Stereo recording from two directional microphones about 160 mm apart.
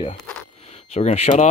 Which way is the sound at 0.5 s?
40° left (ahead or behind).